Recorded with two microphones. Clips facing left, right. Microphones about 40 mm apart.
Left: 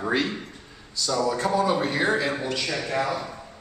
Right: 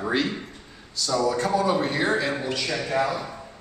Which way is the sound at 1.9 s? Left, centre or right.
Centre.